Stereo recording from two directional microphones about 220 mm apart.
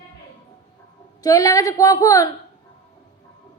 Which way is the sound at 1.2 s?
15° left (ahead or behind).